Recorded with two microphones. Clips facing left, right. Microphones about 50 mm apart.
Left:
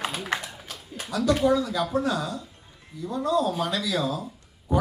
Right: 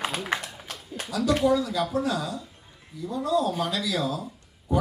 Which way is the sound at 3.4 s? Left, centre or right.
Centre.